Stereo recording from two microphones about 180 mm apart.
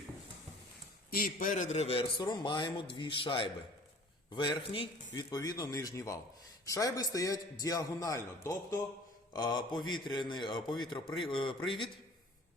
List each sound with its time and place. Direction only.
1.1 s a man's voice: 50° left (ahead or behind); by 11.9 s 30° left (ahead or behind)